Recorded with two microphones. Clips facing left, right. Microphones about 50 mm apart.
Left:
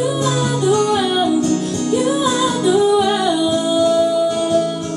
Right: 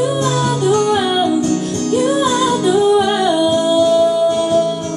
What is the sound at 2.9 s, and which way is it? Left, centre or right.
Music, centre.